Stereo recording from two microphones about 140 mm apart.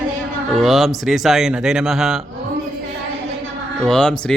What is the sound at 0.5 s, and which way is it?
Speech, centre (ahead or behind).